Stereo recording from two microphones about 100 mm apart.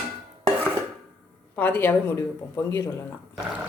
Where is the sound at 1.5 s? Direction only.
20° left (ahead or behind).